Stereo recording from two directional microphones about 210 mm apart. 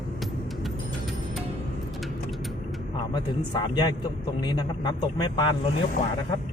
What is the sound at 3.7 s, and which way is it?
Speech, 20° left (ahead or behind).